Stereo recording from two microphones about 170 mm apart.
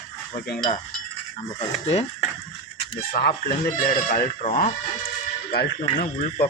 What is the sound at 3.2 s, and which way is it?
Speech, 55° left (ahead or behind).